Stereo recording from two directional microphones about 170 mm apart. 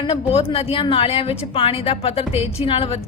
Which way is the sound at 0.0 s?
35° left (ahead or behind).